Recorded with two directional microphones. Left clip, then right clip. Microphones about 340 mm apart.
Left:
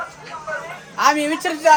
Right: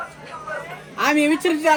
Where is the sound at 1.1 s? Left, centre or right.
Centre.